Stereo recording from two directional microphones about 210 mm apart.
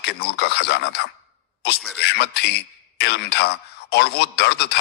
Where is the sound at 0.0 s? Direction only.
50° left (ahead or behind).